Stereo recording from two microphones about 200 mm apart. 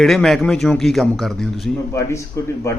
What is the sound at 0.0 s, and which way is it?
A man's voice, centre (ahead or behind).